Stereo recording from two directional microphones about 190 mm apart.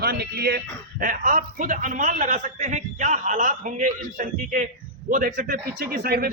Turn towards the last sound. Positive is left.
turn(degrees=-55)  # may be behind; listen again after turning